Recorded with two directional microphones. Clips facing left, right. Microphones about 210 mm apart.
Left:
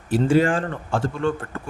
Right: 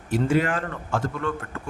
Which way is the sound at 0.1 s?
30° left (ahead or behind).